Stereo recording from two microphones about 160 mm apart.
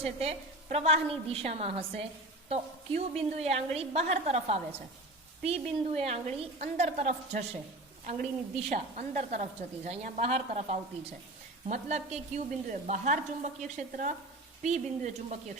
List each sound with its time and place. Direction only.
0.0 s a woman's voice: 40° right (ahead or behind)
8.7 s a woman's voice: 45° right (ahead or behind)